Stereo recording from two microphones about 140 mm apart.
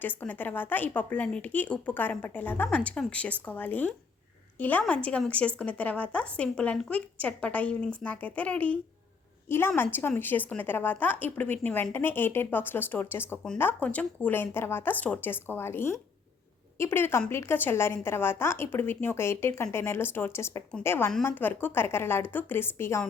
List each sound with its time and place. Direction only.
0.0 s speech: 15° left (ahead or behind)